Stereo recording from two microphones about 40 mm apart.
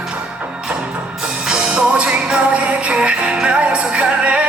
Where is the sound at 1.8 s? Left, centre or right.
Right.